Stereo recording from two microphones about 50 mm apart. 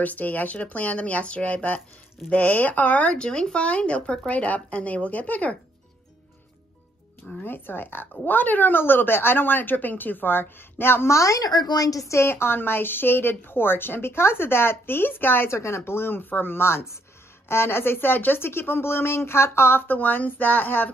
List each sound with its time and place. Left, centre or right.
0.0 s speech: left
3.2 s speech: centre
7.4 s speech: left
11.1 s speech: left
12.0 s speech: left
15.5 s speech: left